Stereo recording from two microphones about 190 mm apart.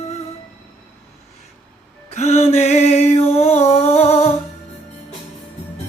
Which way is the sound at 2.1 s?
35° left (ahead or behind).